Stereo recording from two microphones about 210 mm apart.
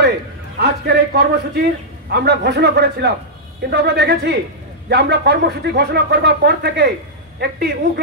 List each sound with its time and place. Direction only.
0.6 s speech: 50° right (ahead or behind)